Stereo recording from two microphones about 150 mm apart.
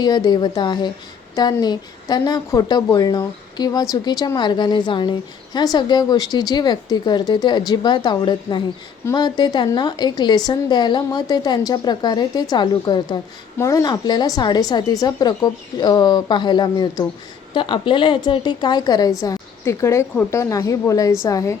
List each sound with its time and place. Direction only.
0.0 s a woman's voice: 25° left (ahead or behind)